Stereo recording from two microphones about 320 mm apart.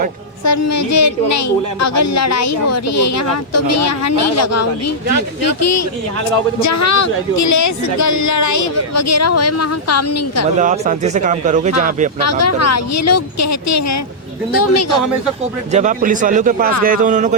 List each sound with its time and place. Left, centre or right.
0.4 s speech: left
10.6 s speech: right
12.2 s speech: left
15.7 s speech: right